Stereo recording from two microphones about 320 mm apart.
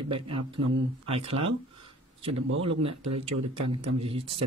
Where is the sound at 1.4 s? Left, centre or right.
Centre.